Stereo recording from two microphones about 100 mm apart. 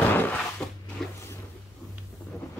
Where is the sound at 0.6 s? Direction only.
Centre (ahead or behind).